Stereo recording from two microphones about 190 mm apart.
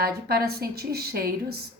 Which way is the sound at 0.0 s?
55° right (ahead or behind).